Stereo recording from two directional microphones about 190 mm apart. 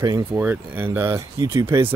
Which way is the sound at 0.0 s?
15° right (ahead or behind).